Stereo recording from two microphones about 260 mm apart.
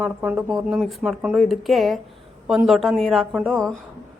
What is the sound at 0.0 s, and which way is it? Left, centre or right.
Speech, centre.